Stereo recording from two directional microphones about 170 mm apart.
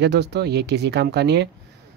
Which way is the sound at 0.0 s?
80° right.